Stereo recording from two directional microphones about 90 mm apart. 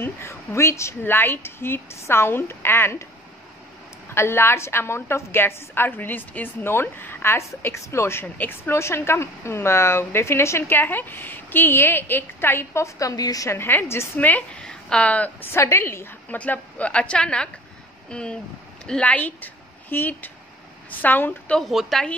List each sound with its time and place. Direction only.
0.0 s a woman's voice: 30° left (ahead or behind)
4.1 s a woman's voice: 30° left (ahead or behind)
13.5 s a woman's voice: 25° left (ahead or behind)
15.5 s a woman's voice: 30° left (ahead or behind)
21.5 s a woman's voice: centre (ahead or behind)